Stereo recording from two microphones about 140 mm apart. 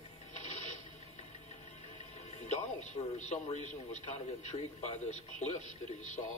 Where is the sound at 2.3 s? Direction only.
55° left (ahead or behind).